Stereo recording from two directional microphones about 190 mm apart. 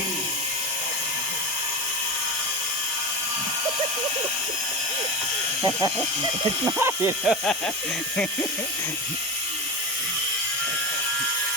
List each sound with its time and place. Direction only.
6.7 s speech: 10° right (ahead or behind)